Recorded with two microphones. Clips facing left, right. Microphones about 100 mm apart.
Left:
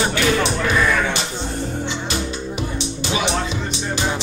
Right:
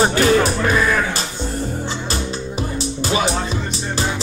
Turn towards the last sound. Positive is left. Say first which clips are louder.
# right 3 dB
turn(degrees=-40)  # may be behind; listen again after turning